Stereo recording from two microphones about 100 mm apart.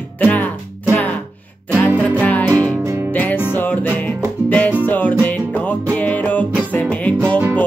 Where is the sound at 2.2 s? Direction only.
15° left (ahead or behind).